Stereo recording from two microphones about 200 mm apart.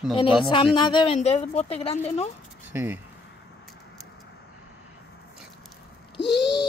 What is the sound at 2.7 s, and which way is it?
Speech, 10° right (ahead or behind).